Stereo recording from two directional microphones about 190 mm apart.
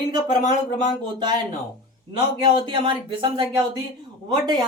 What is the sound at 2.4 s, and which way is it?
Speech, 25° right (ahead or behind).